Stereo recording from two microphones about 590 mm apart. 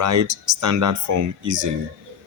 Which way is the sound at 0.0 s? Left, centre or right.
Right.